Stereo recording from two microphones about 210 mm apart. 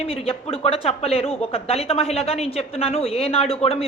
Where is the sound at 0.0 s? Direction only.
25° left (ahead or behind).